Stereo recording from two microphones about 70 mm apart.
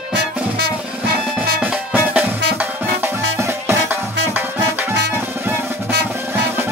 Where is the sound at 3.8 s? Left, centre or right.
Right.